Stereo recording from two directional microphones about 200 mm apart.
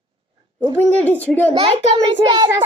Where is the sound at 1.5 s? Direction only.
30° right (ahead or behind).